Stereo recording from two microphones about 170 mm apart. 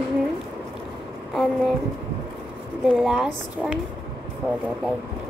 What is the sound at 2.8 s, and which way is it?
Speech, 5° right (ahead or behind).